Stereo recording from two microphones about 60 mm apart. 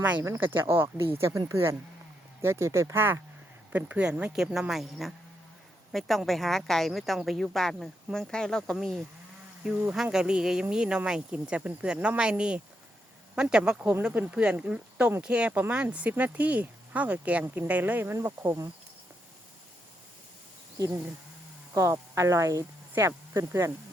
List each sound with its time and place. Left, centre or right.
0.2 s speech: right
2.9 s speech: right
3.7 s speech: right
4.3 s speech: centre
9.9 s speech: centre
14.1 s speech: right
20.7 s speech: right